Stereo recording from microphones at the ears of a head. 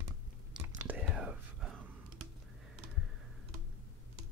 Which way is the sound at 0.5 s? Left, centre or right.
Right.